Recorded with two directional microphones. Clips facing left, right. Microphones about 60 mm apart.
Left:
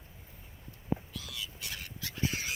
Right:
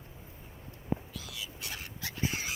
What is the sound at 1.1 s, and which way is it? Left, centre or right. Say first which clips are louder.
Whispering: even; centre.